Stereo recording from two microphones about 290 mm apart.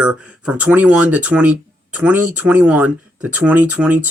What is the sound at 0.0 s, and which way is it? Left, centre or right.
Speech, centre.